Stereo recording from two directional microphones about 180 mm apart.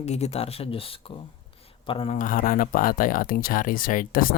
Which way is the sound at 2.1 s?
50° left (ahead or behind).